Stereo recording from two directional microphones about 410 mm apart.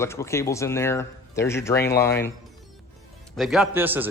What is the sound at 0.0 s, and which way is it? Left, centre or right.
A man's voice, centre.